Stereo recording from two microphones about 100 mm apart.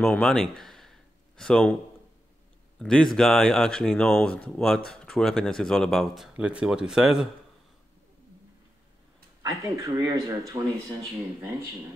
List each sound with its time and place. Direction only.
0.0 s a sound: 10° left (ahead or behind)
2.8 s speech: 5° left (ahead or behind)
6.3 s speech: 10° right (ahead or behind)
9.4 s speech: 35° right (ahead or behind)